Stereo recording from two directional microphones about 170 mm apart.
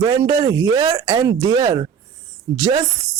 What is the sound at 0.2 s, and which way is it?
Speech, 20° right (ahead or behind).